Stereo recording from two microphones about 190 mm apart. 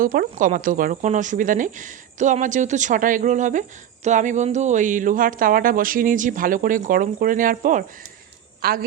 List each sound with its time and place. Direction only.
0.0 s speech: 50° right (ahead or behind)